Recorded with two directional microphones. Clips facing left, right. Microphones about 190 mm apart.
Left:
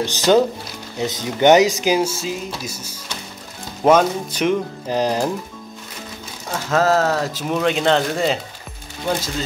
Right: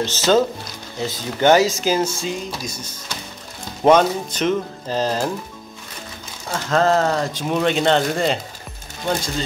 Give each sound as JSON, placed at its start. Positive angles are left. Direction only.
{"t": 0.0, "sound": "speech", "side_deg": 15}
{"t": 6.5, "sound": "speech", "side_deg": 5}